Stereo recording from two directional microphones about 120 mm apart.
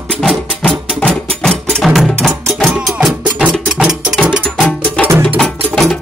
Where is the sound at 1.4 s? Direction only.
5° left (ahead or behind).